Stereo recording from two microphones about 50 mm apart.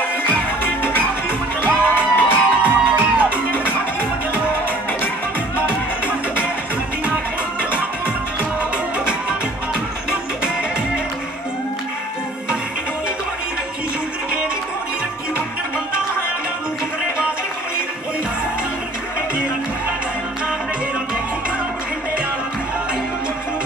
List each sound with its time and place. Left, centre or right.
1.7 s music: right